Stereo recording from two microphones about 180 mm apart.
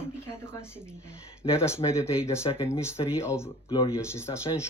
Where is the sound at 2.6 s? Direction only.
15° left (ahead or behind).